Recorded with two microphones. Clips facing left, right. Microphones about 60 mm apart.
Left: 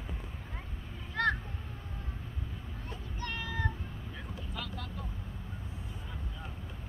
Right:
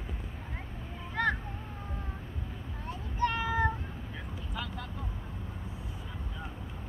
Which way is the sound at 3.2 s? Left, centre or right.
Centre.